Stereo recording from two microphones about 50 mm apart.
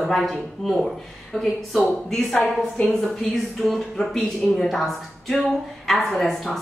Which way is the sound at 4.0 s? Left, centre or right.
Centre.